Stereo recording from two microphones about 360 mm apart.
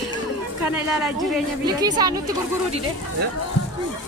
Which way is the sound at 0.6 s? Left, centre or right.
Centre.